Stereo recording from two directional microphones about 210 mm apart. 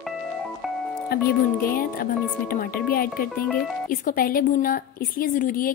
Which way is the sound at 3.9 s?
40° left (ahead or behind).